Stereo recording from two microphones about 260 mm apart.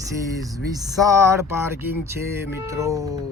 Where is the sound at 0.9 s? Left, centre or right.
Centre.